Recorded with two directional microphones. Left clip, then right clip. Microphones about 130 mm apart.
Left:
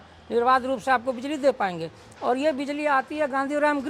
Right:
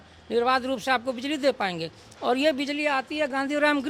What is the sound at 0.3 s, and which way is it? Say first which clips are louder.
Speech: left 2 dB; 25° right (ahead or behind).